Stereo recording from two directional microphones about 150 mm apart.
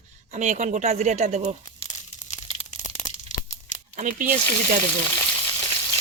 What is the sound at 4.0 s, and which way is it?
Speech, 60° right (ahead or behind).